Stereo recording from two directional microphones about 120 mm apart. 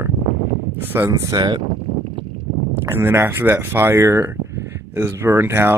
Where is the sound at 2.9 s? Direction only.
20° right (ahead or behind).